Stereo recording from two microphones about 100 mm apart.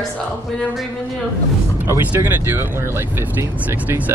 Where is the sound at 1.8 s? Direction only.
25° right (ahead or behind).